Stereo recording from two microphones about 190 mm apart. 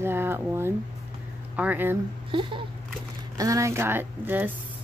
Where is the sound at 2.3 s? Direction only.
25° right (ahead or behind); by 4.5 s 10° right (ahead or behind).